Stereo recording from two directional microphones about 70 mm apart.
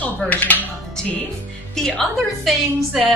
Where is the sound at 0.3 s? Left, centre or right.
Left.